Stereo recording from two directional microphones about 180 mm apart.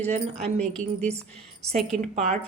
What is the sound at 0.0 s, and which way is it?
Speech, 35° right (ahead or behind).